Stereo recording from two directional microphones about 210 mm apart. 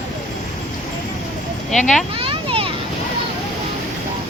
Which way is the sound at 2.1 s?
25° right (ahead or behind).